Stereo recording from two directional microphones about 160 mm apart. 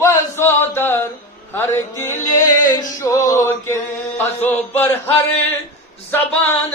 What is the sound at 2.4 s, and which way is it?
Male singing, 25° left (ahead or behind).